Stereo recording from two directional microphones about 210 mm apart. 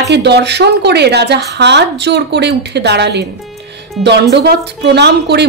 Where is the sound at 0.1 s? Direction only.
55° right (ahead or behind).